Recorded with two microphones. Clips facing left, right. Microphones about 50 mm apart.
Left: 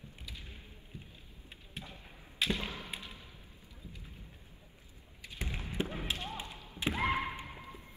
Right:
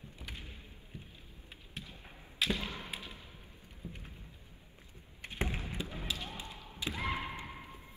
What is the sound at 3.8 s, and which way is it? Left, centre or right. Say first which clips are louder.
Vehicle: right 5 dB; right.